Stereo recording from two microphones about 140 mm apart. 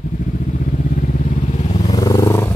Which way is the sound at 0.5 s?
70° left (ahead or behind).